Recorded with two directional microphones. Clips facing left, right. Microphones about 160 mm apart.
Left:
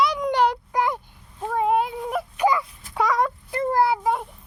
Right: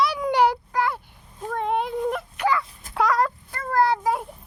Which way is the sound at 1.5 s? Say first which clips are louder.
Left 3 dB; 5° left (ahead or behind).